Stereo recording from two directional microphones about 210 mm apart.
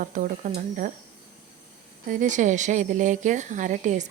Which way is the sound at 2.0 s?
35° right (ahead or behind).